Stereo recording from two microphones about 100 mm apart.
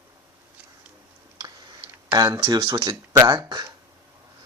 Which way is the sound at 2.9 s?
35° right (ahead or behind).